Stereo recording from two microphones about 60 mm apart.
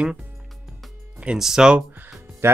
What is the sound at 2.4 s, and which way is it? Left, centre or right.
Speech, right.